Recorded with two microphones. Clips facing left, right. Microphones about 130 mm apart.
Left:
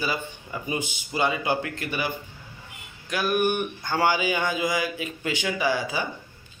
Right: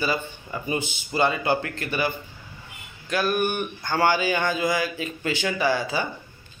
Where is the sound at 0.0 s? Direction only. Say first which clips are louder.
Right 3 dB; 10° left (ahead or behind).